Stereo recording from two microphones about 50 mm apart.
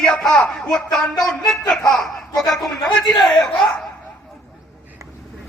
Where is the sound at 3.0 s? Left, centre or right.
Centre.